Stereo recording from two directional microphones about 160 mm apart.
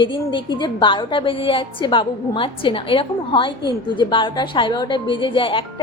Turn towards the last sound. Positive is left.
turn(degrees=30)  # may be behind; listen again after turning